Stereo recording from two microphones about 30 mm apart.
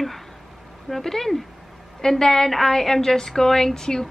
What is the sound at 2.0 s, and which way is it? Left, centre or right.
A woman's voice, centre.